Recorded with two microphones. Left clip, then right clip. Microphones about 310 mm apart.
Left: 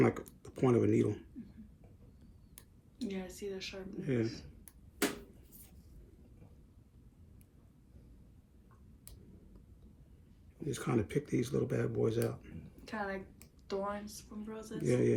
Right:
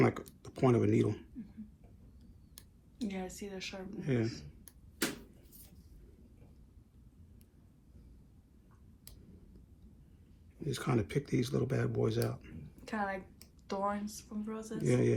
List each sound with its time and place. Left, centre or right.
0.0 s speech: centre
0.4 s a sound: centre
3.0 s a woman's voice: centre
10.6 s a woman's voice: centre